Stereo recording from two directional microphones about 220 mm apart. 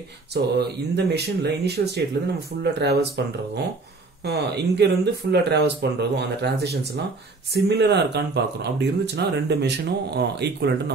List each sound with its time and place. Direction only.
0.3 s speech: 50° right (ahead or behind)
4.2 s speech: 50° right (ahead or behind)